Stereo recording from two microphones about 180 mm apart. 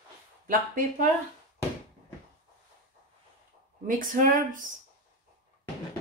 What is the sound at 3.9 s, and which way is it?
Speech, 50° right (ahead or behind).